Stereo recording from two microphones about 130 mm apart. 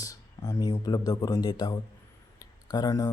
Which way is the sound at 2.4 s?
30° left (ahead or behind).